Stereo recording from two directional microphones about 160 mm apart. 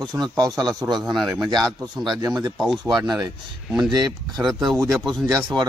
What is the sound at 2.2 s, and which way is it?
Speech, 25° right (ahead or behind).